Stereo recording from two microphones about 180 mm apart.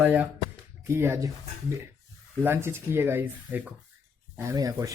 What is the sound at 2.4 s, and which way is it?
Speech, 15° right (ahead or behind).